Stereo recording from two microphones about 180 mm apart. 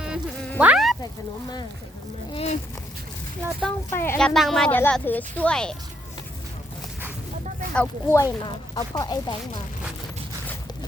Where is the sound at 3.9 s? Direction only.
10° left (ahead or behind).